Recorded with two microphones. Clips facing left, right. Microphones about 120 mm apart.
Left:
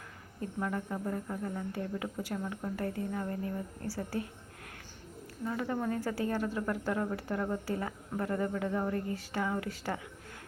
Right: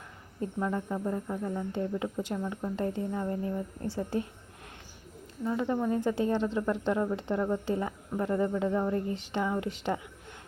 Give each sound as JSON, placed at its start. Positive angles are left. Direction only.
{"t": 0.6, "sound": "speech", "side_deg": -15}
{"t": 5.5, "sound": "speech", "side_deg": -20}